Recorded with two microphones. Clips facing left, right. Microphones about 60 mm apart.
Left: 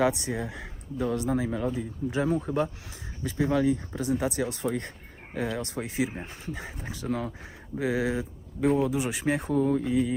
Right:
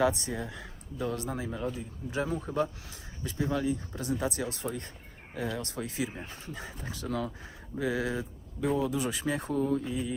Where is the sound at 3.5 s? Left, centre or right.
Left.